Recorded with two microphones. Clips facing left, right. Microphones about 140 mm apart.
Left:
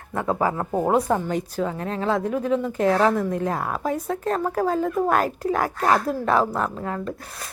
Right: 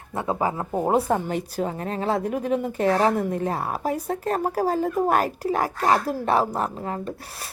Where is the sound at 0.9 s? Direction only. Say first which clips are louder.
Even; 30° right (ahead or behind).